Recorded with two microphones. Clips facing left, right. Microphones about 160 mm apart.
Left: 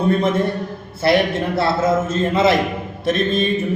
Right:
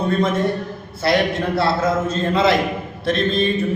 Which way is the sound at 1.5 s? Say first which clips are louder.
Left 2 dB; 25° left (ahead or behind).